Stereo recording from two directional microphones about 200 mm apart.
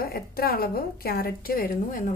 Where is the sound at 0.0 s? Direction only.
50° left (ahead or behind).